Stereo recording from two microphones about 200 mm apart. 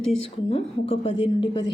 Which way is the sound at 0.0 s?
30° left (ahead or behind).